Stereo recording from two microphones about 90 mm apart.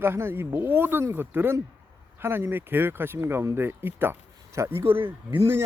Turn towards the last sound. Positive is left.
turn(degrees=-25)  # may be behind; listen again after turning